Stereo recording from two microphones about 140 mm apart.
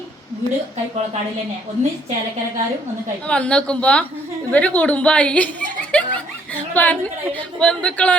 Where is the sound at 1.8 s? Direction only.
55° right (ahead or behind).